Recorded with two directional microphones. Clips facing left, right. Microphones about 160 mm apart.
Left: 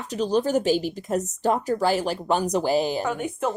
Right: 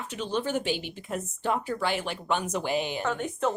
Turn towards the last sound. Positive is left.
turn(degrees=10)  # may be behind; listen again after turning